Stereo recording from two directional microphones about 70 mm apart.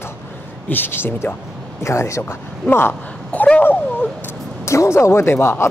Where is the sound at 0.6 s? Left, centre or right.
Left.